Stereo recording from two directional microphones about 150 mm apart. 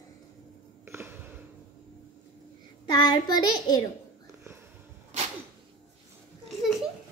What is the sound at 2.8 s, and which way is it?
Child singing, 30° left (ahead or behind).